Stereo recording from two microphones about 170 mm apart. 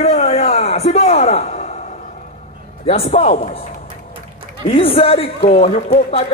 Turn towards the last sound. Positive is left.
turn(degrees=35)  # may be behind; listen again after turning